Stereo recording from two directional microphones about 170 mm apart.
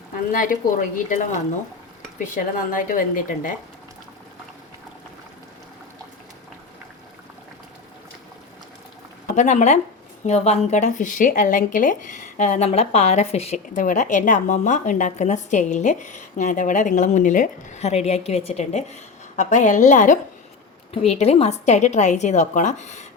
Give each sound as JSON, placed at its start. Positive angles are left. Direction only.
{"t": 0.3, "sound": "speech", "side_deg": 50}
{"t": 9.2, "sound": "speech", "side_deg": 45}